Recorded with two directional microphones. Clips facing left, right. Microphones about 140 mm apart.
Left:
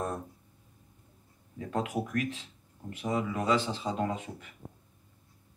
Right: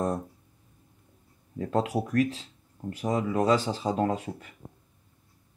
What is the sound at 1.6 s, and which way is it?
Speech, 35° right (ahead or behind).